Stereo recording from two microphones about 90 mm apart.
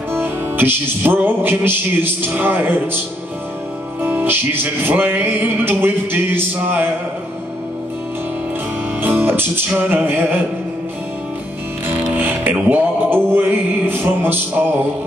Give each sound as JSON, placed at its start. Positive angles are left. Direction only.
{"t": 0.1, "sound": "music", "side_deg": -20}
{"t": 4.0, "sound": "music", "side_deg": -20}
{"t": 9.0, "sound": "music", "side_deg": -20}
{"t": 12.2, "sound": "music", "side_deg": -20}